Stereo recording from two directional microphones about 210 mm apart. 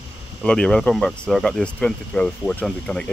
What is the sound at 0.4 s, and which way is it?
Speech, 5° left (ahead or behind).